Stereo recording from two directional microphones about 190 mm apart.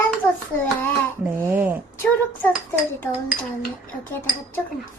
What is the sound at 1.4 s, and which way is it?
Speech, 10° right (ahead or behind).